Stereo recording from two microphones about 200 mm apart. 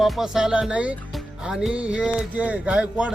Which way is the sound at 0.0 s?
Centre (ahead or behind).